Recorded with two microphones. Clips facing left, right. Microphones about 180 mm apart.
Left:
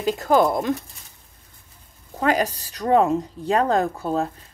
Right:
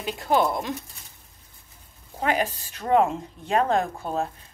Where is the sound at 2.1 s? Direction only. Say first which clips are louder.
Left 4 dB; 40° left (ahead or behind).